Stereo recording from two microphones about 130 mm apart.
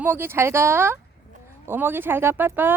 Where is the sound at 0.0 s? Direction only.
15° right (ahead or behind).